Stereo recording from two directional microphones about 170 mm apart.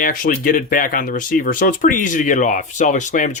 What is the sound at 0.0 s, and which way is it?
Speech, 55° left (ahead or behind).